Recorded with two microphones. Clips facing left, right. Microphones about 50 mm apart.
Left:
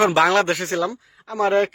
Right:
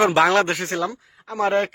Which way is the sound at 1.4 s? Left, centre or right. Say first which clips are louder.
Left 2 dB; centre.